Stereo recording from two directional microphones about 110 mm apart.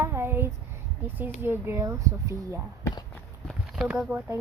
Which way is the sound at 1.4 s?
20° right (ahead or behind).